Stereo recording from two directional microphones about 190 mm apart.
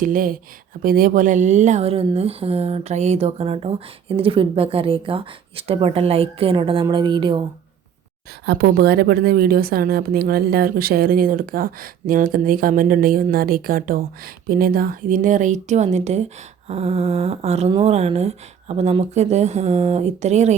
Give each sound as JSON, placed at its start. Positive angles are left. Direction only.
{"t": 0.0, "sound": "a woman's voice", "side_deg": -45}
{"t": 8.4, "sound": "a woman's voice", "side_deg": -50}